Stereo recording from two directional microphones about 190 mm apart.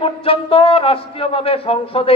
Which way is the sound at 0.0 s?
30° left (ahead or behind).